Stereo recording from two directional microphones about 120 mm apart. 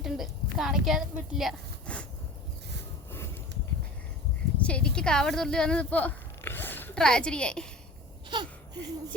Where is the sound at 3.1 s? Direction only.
20° left (ahead or behind).